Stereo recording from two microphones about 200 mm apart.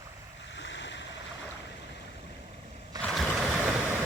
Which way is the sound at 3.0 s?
Centre (ahead or behind).